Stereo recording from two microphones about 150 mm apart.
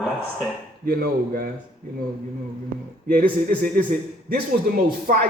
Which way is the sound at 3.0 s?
75° right (ahead or behind).